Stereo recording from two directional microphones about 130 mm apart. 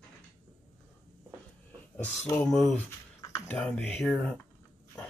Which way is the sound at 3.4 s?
10° left (ahead or behind).